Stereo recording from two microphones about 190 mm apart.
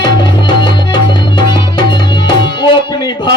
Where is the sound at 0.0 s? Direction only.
25° left (ahead or behind).